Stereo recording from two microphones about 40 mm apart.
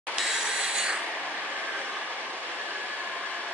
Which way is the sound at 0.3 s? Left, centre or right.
Centre.